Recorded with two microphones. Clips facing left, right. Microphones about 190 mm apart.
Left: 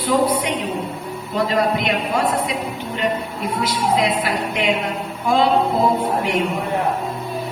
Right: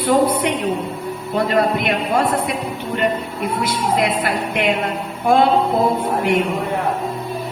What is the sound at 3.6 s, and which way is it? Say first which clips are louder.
Music: left 1 dB; 55° right (ahead or behind).